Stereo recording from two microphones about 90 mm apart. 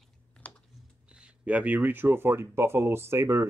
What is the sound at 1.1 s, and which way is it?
Speech, 10° right (ahead or behind).